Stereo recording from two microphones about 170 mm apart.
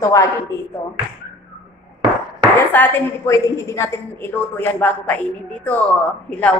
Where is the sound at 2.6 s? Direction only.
10° left (ahead or behind).